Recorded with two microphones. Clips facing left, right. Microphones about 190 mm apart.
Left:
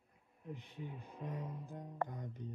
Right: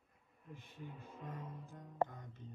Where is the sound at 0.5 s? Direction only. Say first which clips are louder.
Even; 15° left (ahead or behind).